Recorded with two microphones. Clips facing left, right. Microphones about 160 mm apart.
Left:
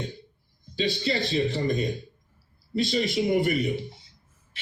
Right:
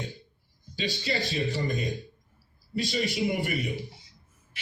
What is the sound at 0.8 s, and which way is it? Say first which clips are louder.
Speech: left 4 dB; 35° left (ahead or behind).